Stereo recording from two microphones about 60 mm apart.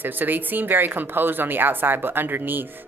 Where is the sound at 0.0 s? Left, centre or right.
Right.